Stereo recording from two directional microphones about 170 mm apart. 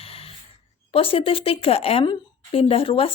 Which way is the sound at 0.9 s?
35° left (ahead or behind).